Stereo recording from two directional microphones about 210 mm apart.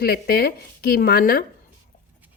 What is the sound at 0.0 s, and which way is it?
A woman's voice, 45° left (ahead or behind).